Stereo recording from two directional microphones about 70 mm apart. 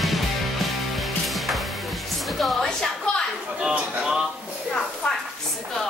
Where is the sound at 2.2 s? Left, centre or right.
Centre.